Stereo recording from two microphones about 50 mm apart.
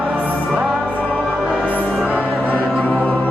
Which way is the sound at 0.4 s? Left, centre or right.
Centre.